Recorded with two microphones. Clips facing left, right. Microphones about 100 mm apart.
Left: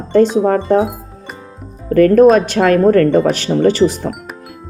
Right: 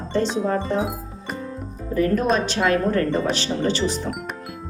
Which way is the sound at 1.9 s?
60° left (ahead or behind).